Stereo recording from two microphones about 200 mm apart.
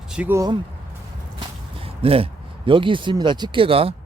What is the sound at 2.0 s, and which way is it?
Speech, 30° right (ahead or behind).